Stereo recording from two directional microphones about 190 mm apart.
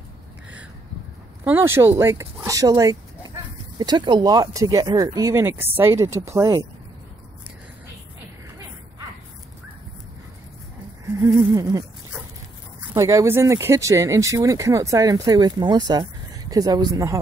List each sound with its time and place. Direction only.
1.4 s speech: 10° right (ahead or behind)
11.1 s speech: 15° right (ahead or behind)
12.9 s speech: 15° right (ahead or behind)